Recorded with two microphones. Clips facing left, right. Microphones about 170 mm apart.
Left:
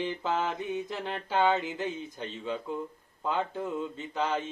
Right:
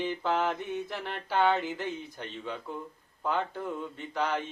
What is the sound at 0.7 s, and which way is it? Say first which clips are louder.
Mantra: left 1 dB; 20° left (ahead or behind).